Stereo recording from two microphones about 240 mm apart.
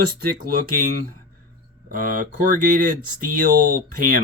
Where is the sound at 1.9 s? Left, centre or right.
Right.